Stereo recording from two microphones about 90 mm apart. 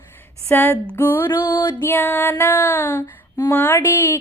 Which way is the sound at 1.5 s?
45° left (ahead or behind).